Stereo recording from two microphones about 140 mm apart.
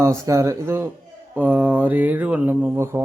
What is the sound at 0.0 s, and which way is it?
Speech, 20° right (ahead or behind).